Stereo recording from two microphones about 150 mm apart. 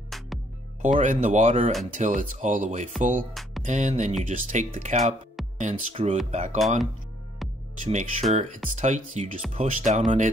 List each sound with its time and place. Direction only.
0.1 s music: centre (ahead or behind)
0.9 s speech: 55° right (ahead or behind)
7.8 s speech: 55° right (ahead or behind)